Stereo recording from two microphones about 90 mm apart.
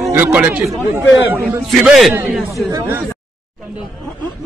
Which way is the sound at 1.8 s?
Centre (ahead or behind).